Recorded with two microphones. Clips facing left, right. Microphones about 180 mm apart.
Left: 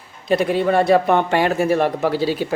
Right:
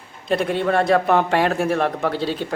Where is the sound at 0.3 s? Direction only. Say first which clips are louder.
Left 3 dB; centre (ahead or behind).